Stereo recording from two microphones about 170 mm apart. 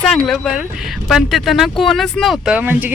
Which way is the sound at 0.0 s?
5° left (ahead or behind).